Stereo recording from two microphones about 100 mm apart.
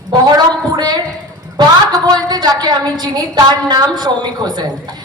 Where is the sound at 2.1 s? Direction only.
40° right (ahead or behind).